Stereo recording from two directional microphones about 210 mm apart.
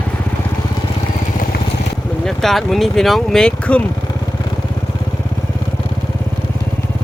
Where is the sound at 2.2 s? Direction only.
Centre (ahead or behind).